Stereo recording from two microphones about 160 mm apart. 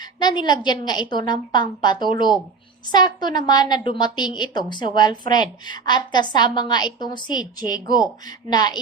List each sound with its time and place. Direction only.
0.2 s a woman's voice: 25° left (ahead or behind)